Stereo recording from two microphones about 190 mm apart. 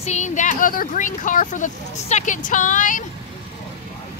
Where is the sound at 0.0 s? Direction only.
35° left (ahead or behind).